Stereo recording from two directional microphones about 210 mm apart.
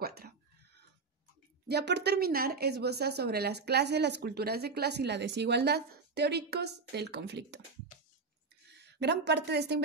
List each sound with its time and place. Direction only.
0.0 s a sound: 50° right (ahead or behind)
1.7 s a woman's voice: 55° right (ahead or behind)
8.8 s a woman's voice: 55° right (ahead or behind)